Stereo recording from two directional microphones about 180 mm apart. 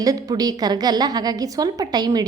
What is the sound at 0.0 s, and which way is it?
A woman's voice, 20° right (ahead or behind).